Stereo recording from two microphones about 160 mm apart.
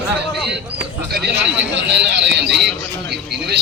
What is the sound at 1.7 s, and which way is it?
Speech, 90° right.